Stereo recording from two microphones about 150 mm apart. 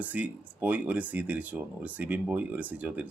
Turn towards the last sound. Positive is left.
turn(degrees=-10)  # may be behind; listen again after turning